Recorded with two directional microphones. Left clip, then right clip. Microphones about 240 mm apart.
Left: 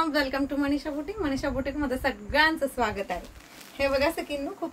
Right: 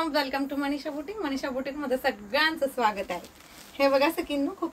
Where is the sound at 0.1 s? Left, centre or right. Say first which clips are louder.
Left 1 dB; centre.